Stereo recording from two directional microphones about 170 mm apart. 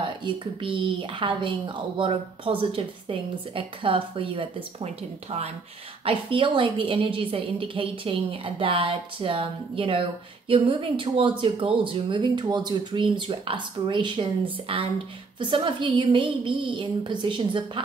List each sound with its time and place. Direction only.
0.0 s a woman's voice: 30° right (ahead or behind)